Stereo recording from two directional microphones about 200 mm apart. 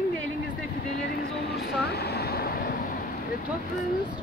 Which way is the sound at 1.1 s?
50° left (ahead or behind).